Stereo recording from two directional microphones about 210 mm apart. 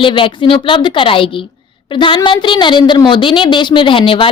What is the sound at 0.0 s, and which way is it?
A woman's voice, 25° left (ahead or behind).